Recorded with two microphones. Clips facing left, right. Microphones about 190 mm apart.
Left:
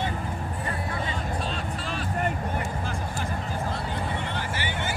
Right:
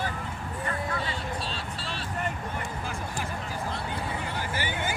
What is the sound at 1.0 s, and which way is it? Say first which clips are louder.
Vehicle: left 3 dB; 30° right (ahead or behind).